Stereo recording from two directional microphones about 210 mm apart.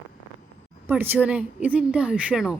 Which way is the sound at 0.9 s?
10° right (ahead or behind).